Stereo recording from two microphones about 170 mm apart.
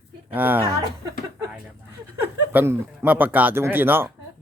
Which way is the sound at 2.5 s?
10° right (ahead or behind).